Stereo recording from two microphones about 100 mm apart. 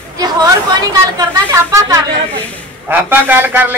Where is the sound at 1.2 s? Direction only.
40° right (ahead or behind).